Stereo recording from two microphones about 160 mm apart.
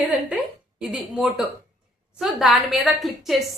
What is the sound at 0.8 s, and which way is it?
A woman's voice, 5° right (ahead or behind).